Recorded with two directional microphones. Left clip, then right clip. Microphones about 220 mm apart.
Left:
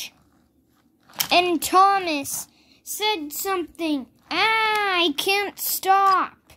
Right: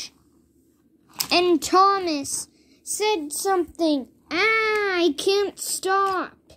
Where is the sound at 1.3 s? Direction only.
5° left (ahead or behind).